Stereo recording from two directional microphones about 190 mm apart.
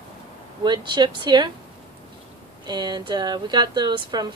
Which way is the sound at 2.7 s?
20° right (ahead or behind).